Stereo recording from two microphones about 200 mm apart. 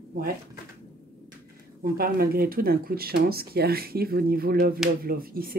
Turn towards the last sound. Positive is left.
turn(degrees=-45)  # may be behind; listen again after turning